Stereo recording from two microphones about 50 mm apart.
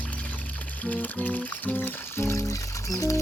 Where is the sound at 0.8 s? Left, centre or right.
Left.